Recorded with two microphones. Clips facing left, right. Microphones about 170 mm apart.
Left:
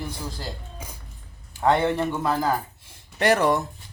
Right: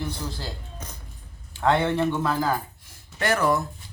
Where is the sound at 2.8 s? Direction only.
30° left (ahead or behind).